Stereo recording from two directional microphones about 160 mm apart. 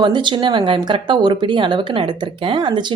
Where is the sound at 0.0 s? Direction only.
30° right (ahead or behind).